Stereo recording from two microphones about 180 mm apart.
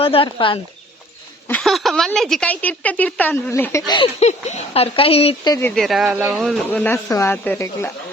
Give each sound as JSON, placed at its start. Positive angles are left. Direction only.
{"t": 0.0, "sound": "speech", "side_deg": 30}
{"t": 1.5, "sound": "a woman's voice", "side_deg": 5}
{"t": 4.2, "sound": "speech", "side_deg": 40}
{"t": 5.5, "sound": "a woman's voice", "side_deg": 15}
{"t": 5.7, "sound": "a woman's voice", "side_deg": 0}